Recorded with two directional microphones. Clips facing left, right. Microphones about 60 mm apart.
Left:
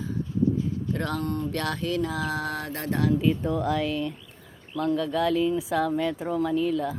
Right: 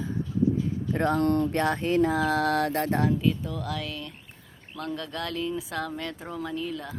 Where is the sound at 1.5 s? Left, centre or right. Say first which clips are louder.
Right 4 dB; right.